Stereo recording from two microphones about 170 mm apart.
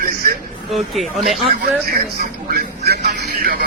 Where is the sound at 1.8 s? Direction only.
55° right (ahead or behind).